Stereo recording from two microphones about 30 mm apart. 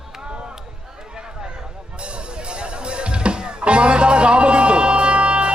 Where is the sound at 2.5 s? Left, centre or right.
Right.